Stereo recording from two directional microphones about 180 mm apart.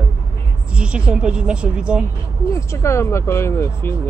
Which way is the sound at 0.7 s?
5° right (ahead or behind).